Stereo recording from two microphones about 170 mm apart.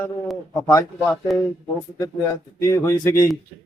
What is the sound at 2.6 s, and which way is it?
Speech, 20° left (ahead or behind).